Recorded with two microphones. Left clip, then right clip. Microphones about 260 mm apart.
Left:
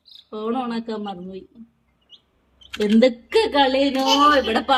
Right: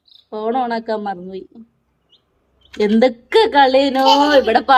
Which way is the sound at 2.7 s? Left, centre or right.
Centre.